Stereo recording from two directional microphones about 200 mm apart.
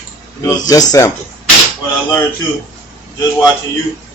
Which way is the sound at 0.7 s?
20° left (ahead or behind).